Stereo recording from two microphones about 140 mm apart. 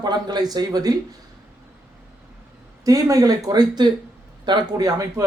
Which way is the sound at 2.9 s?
25° right (ahead or behind).